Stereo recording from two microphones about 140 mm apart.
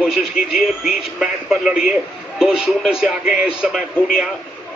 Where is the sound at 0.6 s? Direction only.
5° right (ahead or behind).